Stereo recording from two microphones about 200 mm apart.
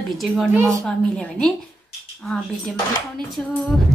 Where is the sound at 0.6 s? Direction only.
15° right (ahead or behind).